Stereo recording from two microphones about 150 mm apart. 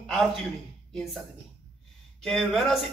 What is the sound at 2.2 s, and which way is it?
Speech, centre (ahead or behind).